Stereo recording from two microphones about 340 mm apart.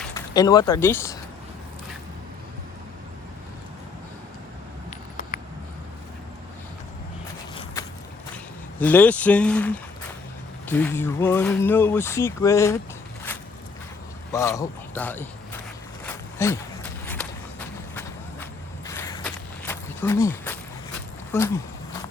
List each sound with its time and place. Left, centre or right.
0.0 s speech: centre
4.9 s vehicle: left
7.5 s a sound: centre
8.8 s speech: centre
14.3 s a man's voice: centre
16.0 s walk: centre
21.3 s speech: centre